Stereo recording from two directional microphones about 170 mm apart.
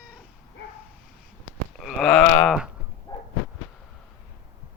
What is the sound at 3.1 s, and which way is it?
Dog, 25° left (ahead or behind).